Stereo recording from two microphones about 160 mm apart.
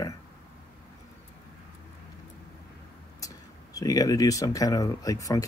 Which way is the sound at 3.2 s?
20° left (ahead or behind).